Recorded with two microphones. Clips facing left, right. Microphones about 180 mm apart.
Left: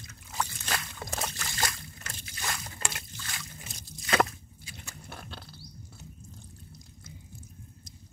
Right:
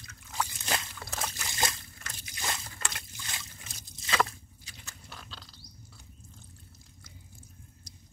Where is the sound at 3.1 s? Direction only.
20° right (ahead or behind).